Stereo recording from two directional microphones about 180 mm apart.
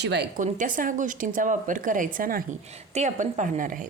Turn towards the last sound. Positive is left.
turn(degrees=-45)  # may be behind; listen again after turning